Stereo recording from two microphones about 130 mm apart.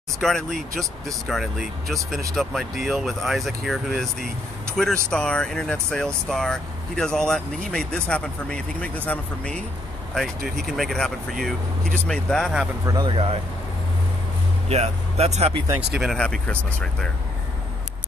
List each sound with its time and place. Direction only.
0.2 s speech: 5° left (ahead or behind)
12.8 s speech: 30° right (ahead or behind)
13.1 s speech: 45° right (ahead or behind)
14.7 s speech: 55° right (ahead or behind)
16.0 s speech: 5° left (ahead or behind)